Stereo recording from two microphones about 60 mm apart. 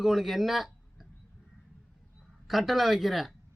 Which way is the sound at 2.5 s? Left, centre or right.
Centre.